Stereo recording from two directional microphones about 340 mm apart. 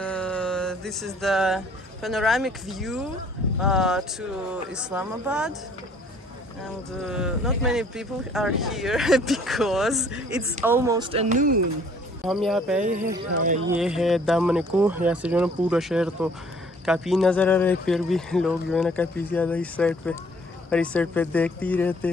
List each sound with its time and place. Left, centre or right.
0.0 s music: centre
3.6 s speech: centre
7.0 s speech: centre; by 11.6 s right
12.2 s speech: centre
13.1 s speech: right
13.7 s speech: centre